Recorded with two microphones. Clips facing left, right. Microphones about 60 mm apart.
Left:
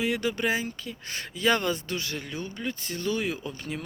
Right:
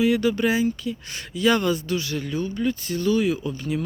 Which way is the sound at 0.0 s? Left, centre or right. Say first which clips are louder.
Right 7 dB; left.